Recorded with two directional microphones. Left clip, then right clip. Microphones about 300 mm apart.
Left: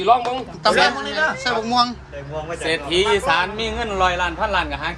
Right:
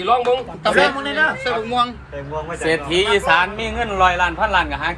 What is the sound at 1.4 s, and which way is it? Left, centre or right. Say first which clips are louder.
Speech: even; centre.